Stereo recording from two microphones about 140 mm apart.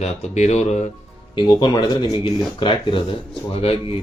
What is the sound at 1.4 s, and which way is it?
Speech, 35° left (ahead or behind).